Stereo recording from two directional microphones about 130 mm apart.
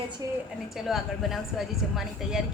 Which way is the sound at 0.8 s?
Centre (ahead or behind).